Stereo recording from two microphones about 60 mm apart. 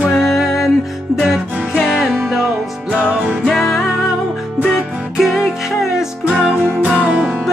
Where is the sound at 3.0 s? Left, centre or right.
Right.